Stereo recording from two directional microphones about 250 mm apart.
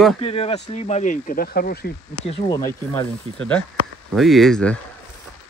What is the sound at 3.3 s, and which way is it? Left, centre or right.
Speech, right.